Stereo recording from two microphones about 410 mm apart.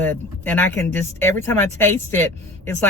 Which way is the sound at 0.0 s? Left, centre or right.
Centre.